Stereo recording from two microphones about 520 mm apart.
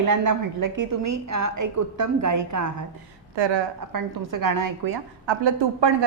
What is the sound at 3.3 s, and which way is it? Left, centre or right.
Speech, right.